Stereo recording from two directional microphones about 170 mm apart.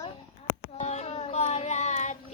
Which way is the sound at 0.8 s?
40° left (ahead or behind).